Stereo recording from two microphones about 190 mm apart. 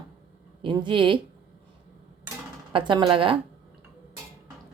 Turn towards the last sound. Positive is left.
turn(degrees=-25)  # may be behind; listen again after turning